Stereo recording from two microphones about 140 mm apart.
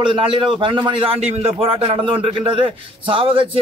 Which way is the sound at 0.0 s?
40° right (ahead or behind).